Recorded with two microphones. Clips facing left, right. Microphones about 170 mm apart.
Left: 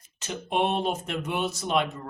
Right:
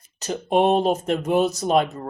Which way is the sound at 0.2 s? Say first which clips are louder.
Right 7 dB; 40° right (ahead or behind).